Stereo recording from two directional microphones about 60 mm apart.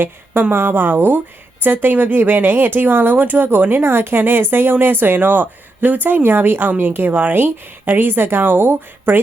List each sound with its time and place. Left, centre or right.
0.0 s speech: right